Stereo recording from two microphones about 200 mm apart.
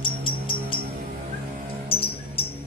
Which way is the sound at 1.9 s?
30° left (ahead or behind).